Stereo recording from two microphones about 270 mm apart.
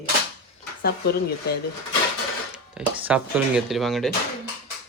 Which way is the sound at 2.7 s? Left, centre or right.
Centre.